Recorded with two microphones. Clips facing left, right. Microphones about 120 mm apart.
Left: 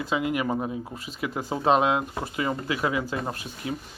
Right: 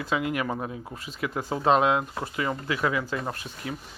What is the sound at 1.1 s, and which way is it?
Speech, 5° left (ahead or behind).